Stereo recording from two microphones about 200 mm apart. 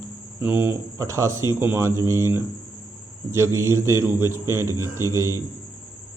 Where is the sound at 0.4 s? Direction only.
10° right (ahead or behind).